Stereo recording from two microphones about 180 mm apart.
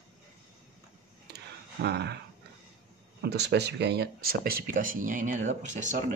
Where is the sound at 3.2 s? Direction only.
70° right (ahead or behind); by 5.9 s 40° right (ahead or behind).